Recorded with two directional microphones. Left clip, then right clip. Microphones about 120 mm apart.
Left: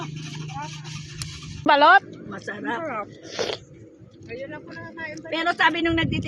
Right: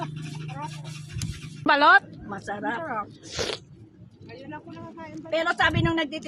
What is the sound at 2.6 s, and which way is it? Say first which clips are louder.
Speech: left 2 dB; 35° right (ahead or behind).